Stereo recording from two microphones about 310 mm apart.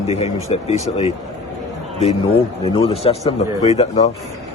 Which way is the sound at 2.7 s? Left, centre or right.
Centre.